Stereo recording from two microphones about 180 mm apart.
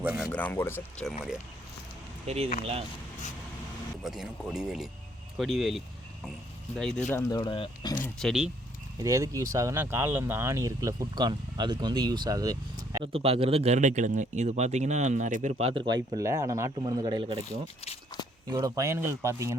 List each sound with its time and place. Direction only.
0.0 s speech: 10° right (ahead or behind)
0.3 s speech: 10° left (ahead or behind)
2.2 s speech: 35° right (ahead or behind)
4.0 s speech: centre (ahead or behind)
7.1 s speech: 20° left (ahead or behind)
8.0 s speech: centre (ahead or behind)
9.0 s speech: 20° right (ahead or behind)
18.4 s speech: 20° right (ahead or behind)